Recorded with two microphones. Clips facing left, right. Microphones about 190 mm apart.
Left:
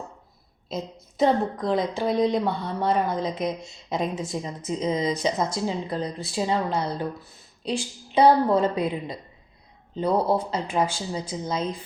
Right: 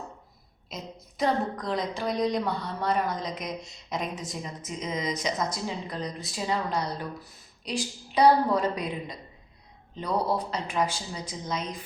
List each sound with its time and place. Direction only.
0.7 s a woman's voice: 25° left (ahead or behind)